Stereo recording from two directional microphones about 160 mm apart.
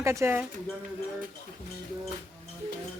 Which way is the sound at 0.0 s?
15° right (ahead or behind).